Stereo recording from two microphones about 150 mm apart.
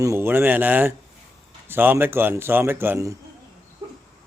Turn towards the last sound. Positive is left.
turn(degrees=-15)  # may be behind; listen again after turning